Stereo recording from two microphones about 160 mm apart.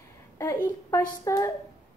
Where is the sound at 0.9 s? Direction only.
20° left (ahead or behind).